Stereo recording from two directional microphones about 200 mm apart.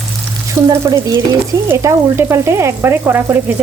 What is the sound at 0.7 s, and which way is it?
Frying, 20° right (ahead or behind).